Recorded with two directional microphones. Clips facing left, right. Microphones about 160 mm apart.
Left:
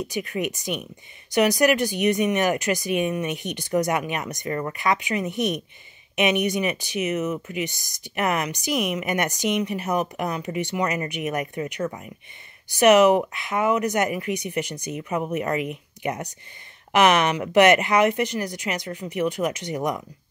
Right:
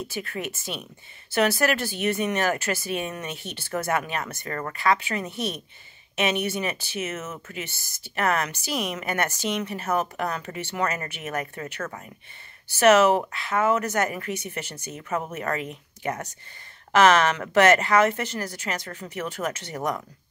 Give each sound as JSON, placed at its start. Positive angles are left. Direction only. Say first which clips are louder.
{"t": 0.0, "sound": "speech", "louder": "left 5 dB", "side_deg": 15}